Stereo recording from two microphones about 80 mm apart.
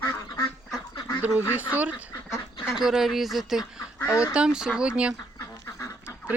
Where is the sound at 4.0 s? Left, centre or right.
Left.